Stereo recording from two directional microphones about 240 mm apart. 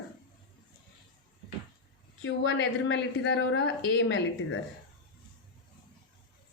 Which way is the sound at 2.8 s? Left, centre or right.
Left.